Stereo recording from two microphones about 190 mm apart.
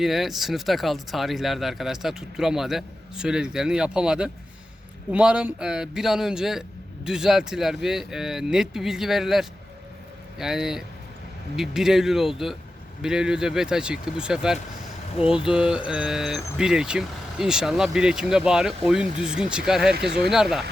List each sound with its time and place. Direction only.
0.0 s speech: centre (ahead or behind)
20.1 s speech: 60° right (ahead or behind)
20.3 s speech: centre (ahead or behind)